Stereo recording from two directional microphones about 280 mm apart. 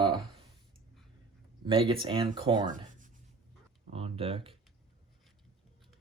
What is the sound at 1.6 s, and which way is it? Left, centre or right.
Speech, centre.